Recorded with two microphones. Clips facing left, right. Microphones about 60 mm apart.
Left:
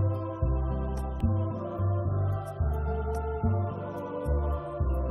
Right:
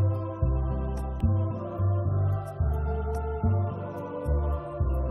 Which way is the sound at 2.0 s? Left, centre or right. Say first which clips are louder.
Right 1 dB; centre.